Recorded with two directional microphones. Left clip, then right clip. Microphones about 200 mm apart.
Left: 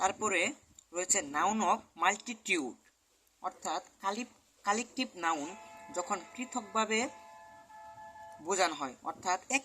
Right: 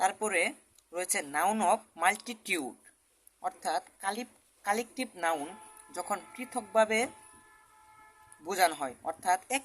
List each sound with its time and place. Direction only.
0.0 s a sound: 20° right (ahead or behind)
0.9 s a woman's voice: 20° right (ahead or behind)
8.5 s speech: 15° right (ahead or behind)